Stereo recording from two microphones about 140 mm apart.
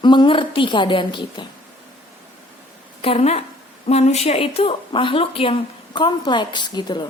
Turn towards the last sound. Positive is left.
turn(degrees=35)  # may be behind; listen again after turning